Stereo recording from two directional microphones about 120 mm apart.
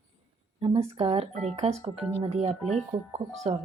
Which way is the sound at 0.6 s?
60° right (ahead or behind).